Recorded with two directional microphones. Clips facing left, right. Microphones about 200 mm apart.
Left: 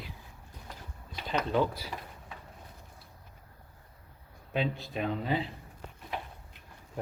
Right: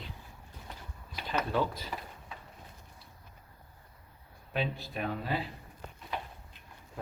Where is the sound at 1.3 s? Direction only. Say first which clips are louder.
Left 2 dB; 10° left (ahead or behind).